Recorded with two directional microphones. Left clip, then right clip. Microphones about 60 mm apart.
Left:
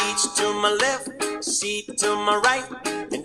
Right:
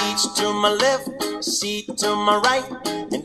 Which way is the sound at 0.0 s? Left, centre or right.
Left.